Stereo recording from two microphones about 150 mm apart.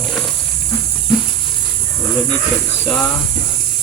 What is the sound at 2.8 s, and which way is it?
Speech, 5° left (ahead or behind).